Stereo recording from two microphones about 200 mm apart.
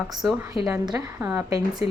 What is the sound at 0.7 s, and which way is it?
Speech, 15° right (ahead or behind).